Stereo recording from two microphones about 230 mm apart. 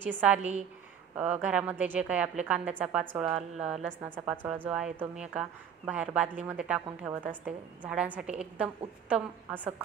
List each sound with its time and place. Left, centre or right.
0.0 s a woman's voice: centre
0.4 s a woman's voice: right
1.1 s a woman's voice: centre